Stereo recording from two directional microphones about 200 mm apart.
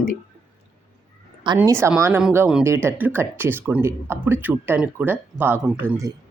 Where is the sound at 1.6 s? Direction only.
15° right (ahead or behind).